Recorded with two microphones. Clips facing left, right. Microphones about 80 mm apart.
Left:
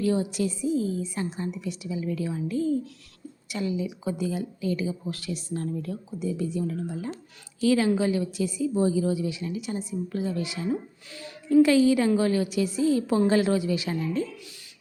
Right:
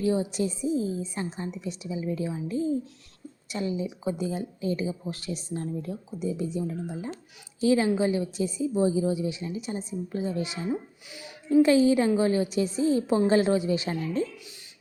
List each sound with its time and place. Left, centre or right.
0.0 s speech: right